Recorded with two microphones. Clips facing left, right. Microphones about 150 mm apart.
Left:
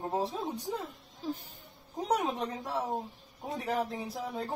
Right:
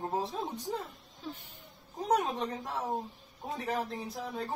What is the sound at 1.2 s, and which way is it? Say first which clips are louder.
Insect: left 6 dB; 40° left (ahead or behind).